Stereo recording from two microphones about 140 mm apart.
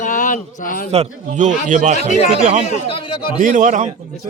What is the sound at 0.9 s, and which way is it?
A man's voice, 55° right (ahead or behind).